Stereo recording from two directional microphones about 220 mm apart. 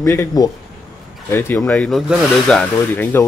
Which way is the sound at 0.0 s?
10° left (ahead or behind).